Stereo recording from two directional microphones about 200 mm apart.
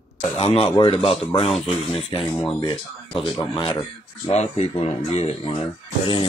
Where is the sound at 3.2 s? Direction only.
25° left (ahead or behind).